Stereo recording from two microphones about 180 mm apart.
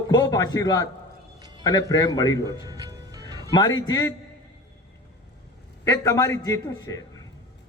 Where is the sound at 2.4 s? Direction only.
20° right (ahead or behind).